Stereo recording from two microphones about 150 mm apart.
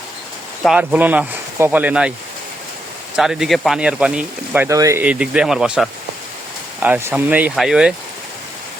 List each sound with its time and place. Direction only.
0.6 s speech: 5° right (ahead or behind)
3.2 s speech: centre (ahead or behind); by 5.0 s 20° right (ahead or behind)
5.0 s speech: 5° right (ahead or behind)